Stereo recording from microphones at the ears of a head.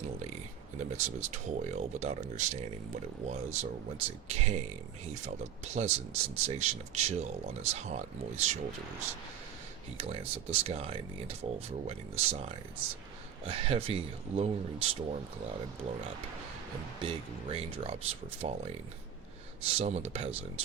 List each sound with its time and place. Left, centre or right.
0.8 s speech: right